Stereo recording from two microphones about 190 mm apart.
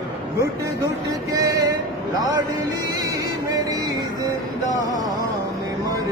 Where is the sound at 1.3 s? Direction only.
15° right (ahead or behind).